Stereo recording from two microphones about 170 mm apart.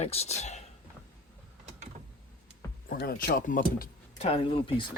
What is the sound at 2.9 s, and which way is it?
Speech, 60° left (ahead or behind).